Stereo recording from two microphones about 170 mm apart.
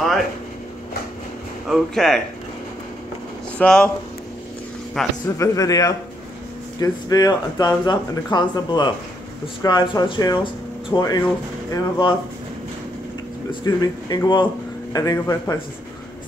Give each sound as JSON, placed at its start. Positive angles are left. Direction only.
{"t": 1.7, "sound": "speech", "side_deg": 0}
{"t": 3.5, "sound": "speech", "side_deg": 5}
{"t": 5.0, "sound": "speech", "side_deg": 0}
{"t": 5.4, "sound": "speech", "side_deg": 20}
{"t": 13.7, "sound": "speech", "side_deg": 25}